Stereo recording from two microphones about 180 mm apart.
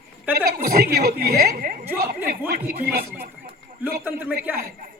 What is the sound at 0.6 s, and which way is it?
Speech, 55° right (ahead or behind).